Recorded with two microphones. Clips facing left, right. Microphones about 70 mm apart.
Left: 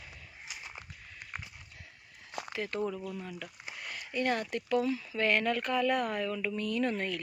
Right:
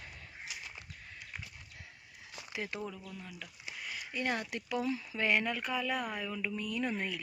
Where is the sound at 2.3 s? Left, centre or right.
Left.